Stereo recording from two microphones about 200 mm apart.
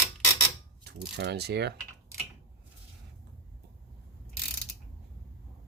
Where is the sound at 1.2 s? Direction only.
55° right (ahead or behind).